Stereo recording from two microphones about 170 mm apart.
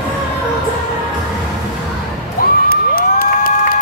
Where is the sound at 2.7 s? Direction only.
60° left (ahead or behind).